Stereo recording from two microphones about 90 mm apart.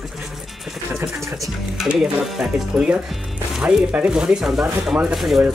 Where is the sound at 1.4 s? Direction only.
5° right (ahead or behind).